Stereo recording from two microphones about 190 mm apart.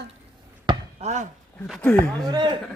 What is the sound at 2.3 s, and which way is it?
Speech, 25° right (ahead or behind).